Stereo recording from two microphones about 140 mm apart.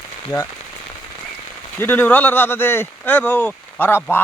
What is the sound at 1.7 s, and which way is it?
Speech, 15° left (ahead or behind).